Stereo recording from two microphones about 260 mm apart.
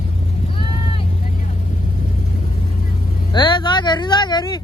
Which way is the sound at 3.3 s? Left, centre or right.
Centre.